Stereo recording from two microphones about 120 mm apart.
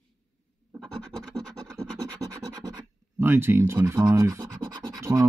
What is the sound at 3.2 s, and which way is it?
Speech, 20° right (ahead or behind).